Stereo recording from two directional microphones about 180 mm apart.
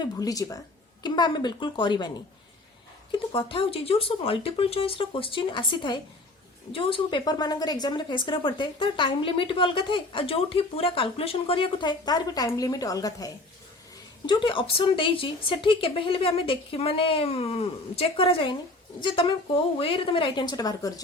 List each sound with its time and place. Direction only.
0.0 s speech: 20° left (ahead or behind)